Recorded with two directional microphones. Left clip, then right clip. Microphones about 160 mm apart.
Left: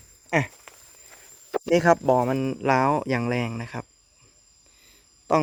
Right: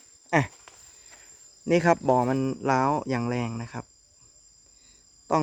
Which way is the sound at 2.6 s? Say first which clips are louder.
Left 4 dB; 5° left (ahead or behind).